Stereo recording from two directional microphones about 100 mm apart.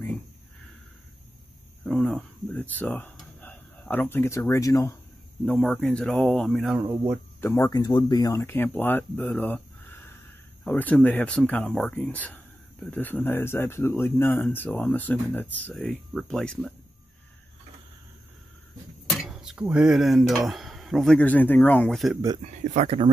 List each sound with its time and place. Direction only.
1.9 s speech: 10° left (ahead or behind); by 4.9 s 35° left (ahead or behind)
5.4 s speech: 5° left (ahead or behind)
6.8 s speech: 20° right (ahead or behind)
7.3 s speech: 20° left (ahead or behind)
7.6 s speech: 40° left (ahead or behind)
8.4 s speech: 20° left (ahead or behind)
9.2 s a sound: 15° left (ahead or behind)
10.6 s speech: 15° left (ahead or behind)
15.7 s speech: 5° left (ahead or behind)
19.0 s a sound: centre (ahead or behind)
19.7 s speech: 5° right (ahead or behind)
21.2 s speech: 15° left (ahead or behind)
21.9 s speech: centre (ahead or behind)
22.4 s speech: 90° right